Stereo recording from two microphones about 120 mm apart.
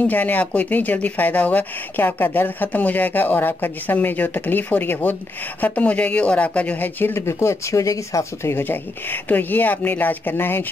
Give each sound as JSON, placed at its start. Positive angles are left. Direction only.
{"t": 0.0, "sound": "speech", "side_deg": 15}